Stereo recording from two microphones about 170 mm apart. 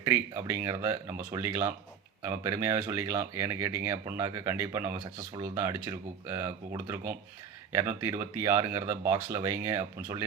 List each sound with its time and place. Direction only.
0.0 s speech: 15° right (ahead or behind)